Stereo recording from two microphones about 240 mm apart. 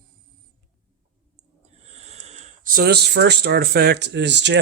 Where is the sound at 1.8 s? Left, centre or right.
Right.